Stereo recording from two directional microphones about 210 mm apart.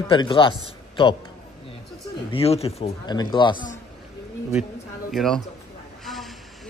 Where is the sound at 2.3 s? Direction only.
25° left (ahead or behind).